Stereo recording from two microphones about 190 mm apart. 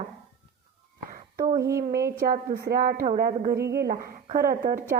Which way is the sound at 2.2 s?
50° right (ahead or behind).